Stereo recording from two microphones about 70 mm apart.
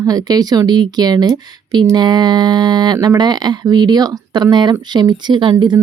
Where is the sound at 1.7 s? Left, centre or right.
Right.